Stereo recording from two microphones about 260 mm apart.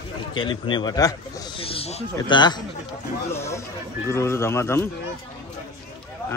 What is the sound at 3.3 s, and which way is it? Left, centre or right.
A man's voice, centre.